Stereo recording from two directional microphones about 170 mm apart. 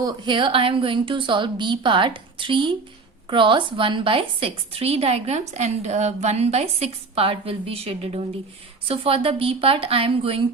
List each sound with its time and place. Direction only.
0.0 s a woman's voice: 25° right (ahead or behind)